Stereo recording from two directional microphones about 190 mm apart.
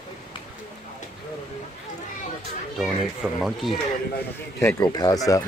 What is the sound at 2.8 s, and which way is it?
Speech, centre (ahead or behind).